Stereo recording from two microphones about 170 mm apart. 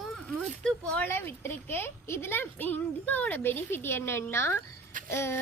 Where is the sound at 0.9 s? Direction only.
10° left (ahead or behind).